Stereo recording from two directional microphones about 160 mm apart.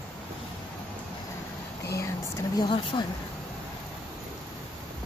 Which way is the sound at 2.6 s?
30° left (ahead or behind).